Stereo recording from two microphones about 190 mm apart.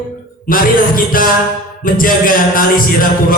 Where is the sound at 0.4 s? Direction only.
50° left (ahead or behind).